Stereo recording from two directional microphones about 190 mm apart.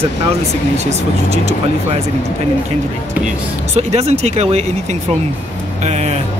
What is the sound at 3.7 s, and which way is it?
Speech, 35° right (ahead or behind).